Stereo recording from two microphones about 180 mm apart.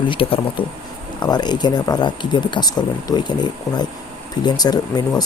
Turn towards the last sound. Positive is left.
turn(degrees=20)  # may be behind; listen again after turning